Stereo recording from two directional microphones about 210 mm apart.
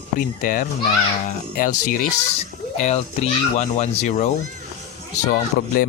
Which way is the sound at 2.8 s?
30° left (ahead or behind).